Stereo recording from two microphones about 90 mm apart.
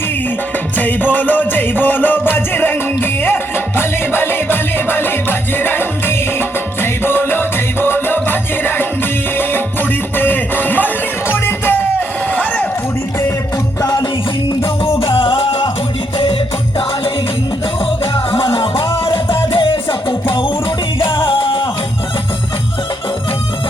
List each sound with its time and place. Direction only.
0.8 s music: 20° left (ahead or behind)
10.2 s music: 20° left (ahead or behind)
14.6 s music: 80° left
16.1 s music: 85° left
19.1 s music: 70° left (ahead or behind)